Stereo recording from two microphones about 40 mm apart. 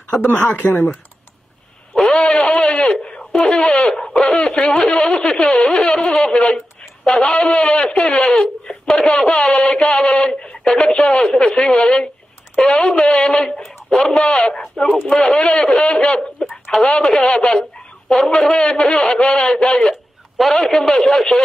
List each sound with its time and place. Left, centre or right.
0.3 s speech: left
2.0 s sheep: left
3.0 s a sound: left
3.3 s speech: centre
4.9 s a sound: left
7.1 s a man's voice: centre
7.3 s a man's voice: left
8.6 s a sound: centre
10.8 s a man's voice: left
20.3 s a man's voice: centre